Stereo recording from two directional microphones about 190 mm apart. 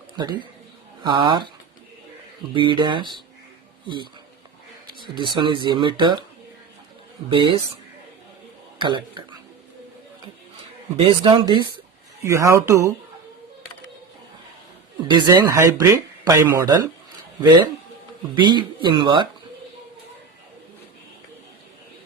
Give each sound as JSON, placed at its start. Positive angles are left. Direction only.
{"t": 0.2, "sound": "speech", "side_deg": -25}
{"t": 2.5, "sound": "speech", "side_deg": -25}
{"t": 4.9, "sound": "a sound", "side_deg": -25}
{"t": 5.2, "sound": "speech", "side_deg": -25}
{"t": 7.3, "sound": "speech", "side_deg": -25}
{"t": 8.8, "sound": "speech", "side_deg": -25}
{"t": 10.9, "sound": "speech", "side_deg": -30}
{"t": 15.0, "sound": "speech", "side_deg": -25}
{"t": 18.3, "sound": "speech", "side_deg": -25}